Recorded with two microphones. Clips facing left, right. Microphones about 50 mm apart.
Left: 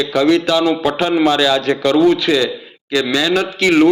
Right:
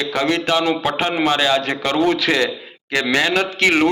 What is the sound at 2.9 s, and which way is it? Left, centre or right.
Speech, right.